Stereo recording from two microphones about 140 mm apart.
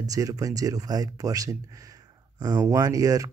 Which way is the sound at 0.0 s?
25° right (ahead or behind).